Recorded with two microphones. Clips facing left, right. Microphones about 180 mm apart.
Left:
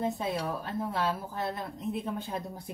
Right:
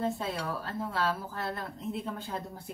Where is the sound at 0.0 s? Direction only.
15° left (ahead or behind).